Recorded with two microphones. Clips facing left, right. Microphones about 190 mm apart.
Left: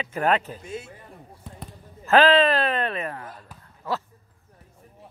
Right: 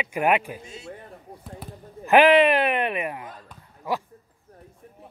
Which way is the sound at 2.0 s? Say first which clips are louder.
Right 2 dB; 15° right (ahead or behind).